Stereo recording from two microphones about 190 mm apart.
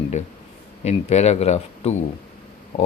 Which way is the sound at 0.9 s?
35° left (ahead or behind).